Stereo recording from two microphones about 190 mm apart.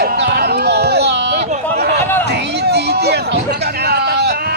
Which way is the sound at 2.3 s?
60° right (ahead or behind).